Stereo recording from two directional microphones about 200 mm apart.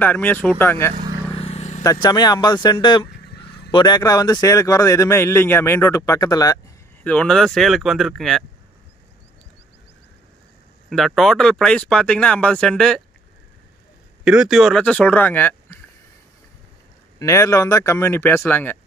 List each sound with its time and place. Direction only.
0.0 s speech: 10° left (ahead or behind)
1.3 s vehicle: 30° left (ahead or behind)
1.8 s speech: 20° left (ahead or behind)
3.3 s a sound: 55° left (ahead or behind)
3.7 s speech: 20° left (ahead or behind)
7.0 s speech: 5° left (ahead or behind)
10.9 s speech: centre (ahead or behind)
14.2 s speech: 5° right (ahead or behind)
17.2 s speech: 15° left (ahead or behind)